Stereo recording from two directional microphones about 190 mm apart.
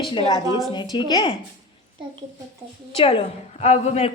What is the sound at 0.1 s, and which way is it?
Speech, 30° left (ahead or behind).